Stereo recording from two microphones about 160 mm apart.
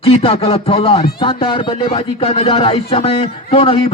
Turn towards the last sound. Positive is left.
turn(degrees=35)  # may be behind; listen again after turning